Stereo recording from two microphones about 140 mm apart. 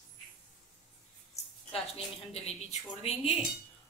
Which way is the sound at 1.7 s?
45° left (ahead or behind).